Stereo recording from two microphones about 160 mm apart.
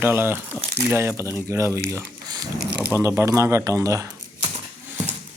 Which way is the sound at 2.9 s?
15° right (ahead or behind).